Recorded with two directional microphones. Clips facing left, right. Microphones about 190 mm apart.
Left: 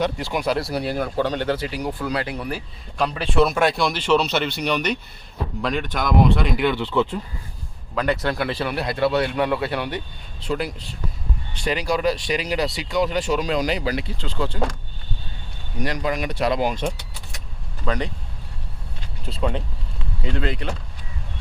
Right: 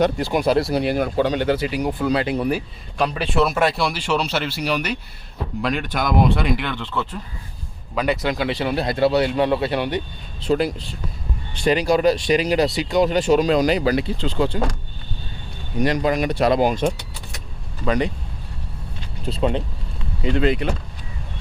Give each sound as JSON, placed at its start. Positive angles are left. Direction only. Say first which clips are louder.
{"t": 0.0, "sound": "speech", "louder": "right 5 dB", "side_deg": -50}
{"t": 0.3, "sound": "speech", "louder": "right 5 dB", "side_deg": -25}
{"t": 3.0, "sound": "speech", "louder": "even", "side_deg": -5}
{"t": 6.6, "sound": "speech", "louder": "left 6 dB", "side_deg": 10}
{"t": 7.9, "sound": "speech", "louder": "right 1 dB", "side_deg": -10}
{"t": 11.9, "sound": "speech", "louder": "right 4 dB", "side_deg": -45}
{"t": 13.1, "sound": "speech", "louder": "right 6 dB", "side_deg": -25}
{"t": 14.0, "sound": "speech", "louder": "right 6 dB", "side_deg": -25}
{"t": 15.8, "sound": "speech", "louder": "right 5 dB", "side_deg": -25}
{"t": 17.8, "sound": "speech", "louder": "right 5 dB", "side_deg": -10}
{"t": 19.3, "sound": "speech", "louder": "right 4 dB", "side_deg": -25}